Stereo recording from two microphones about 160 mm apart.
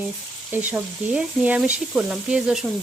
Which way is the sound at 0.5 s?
10° right (ahead or behind).